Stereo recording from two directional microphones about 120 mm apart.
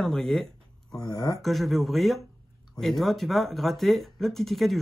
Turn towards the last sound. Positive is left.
turn(degrees=0)  # may be behind; listen again after turning